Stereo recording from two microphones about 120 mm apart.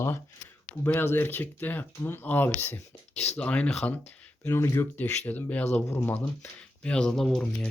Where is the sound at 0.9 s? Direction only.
20° left (ahead or behind).